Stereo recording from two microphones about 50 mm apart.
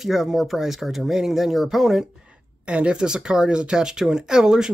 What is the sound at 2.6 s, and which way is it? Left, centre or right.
Speech, right.